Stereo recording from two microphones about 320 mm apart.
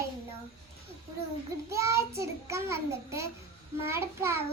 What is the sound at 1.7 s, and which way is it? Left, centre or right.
A child's voice, centre.